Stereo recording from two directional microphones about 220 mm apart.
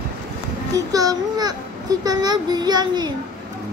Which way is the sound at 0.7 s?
15° right (ahead or behind).